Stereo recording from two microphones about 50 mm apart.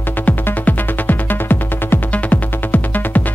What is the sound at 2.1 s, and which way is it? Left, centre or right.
Music, left.